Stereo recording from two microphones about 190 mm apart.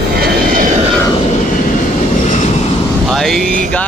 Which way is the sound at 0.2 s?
45° right (ahead or behind).